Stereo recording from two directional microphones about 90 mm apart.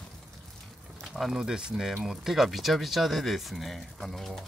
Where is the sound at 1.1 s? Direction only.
5° right (ahead or behind).